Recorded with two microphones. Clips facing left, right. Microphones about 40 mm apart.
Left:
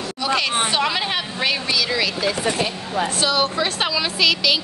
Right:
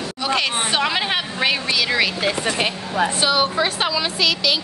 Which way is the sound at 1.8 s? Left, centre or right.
Right.